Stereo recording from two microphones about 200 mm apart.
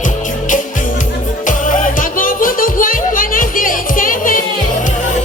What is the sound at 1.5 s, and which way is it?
Music, 40° left (ahead or behind).